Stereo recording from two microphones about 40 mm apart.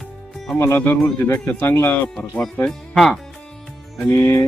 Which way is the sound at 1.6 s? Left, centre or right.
Left.